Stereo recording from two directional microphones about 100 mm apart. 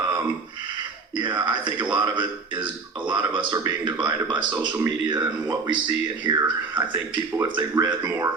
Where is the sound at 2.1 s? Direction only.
55° right (ahead or behind).